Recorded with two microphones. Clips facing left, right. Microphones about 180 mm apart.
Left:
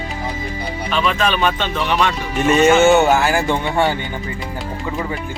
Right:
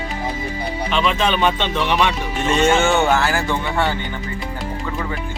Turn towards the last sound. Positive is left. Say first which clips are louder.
# left 3 dB
turn(degrees=15)  # may be behind; listen again after turning